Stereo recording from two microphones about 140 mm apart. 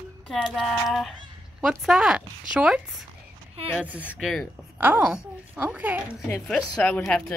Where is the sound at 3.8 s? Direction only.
10° right (ahead or behind).